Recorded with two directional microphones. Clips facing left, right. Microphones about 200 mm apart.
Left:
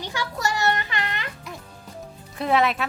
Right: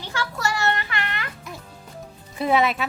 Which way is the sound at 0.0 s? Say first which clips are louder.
Even; 15° left (ahead or behind).